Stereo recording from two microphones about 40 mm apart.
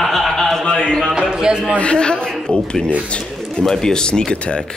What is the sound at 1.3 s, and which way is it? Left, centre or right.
Speech, centre.